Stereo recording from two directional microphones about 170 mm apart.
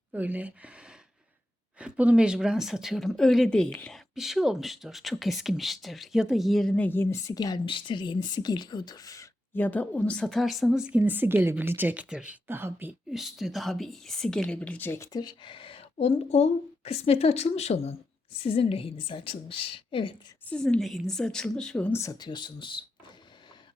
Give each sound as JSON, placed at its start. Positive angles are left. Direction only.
{"t": 0.1, "sound": "a woman's voice", "side_deg": -10}
{"t": 20.5, "sound": "speech", "side_deg": 5}
{"t": 22.0, "sound": "speech", "side_deg": 25}